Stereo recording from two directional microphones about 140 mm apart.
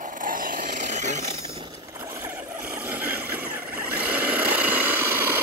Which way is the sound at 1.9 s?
20° right (ahead or behind).